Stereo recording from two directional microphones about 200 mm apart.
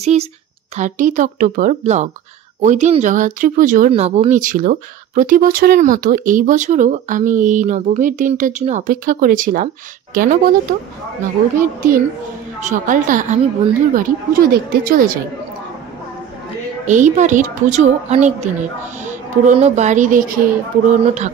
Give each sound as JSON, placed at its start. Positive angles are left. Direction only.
{"t": 0.0, "sound": "a woman's voice", "side_deg": -35}
{"t": 11.6, "sound": "a woman's voice", "side_deg": -40}
{"t": 16.8, "sound": "speech", "side_deg": -40}